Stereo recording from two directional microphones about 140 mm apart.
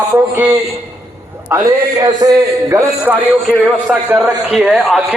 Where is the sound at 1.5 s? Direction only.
20° right (ahead or behind).